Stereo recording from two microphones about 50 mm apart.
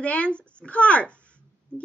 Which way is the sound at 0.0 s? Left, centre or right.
Left.